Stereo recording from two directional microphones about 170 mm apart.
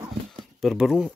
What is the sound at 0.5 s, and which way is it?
Speech, centre (ahead or behind).